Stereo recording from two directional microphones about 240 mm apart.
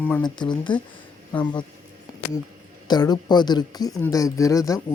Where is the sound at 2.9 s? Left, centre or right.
Centre.